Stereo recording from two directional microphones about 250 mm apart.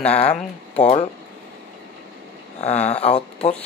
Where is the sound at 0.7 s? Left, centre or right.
Left.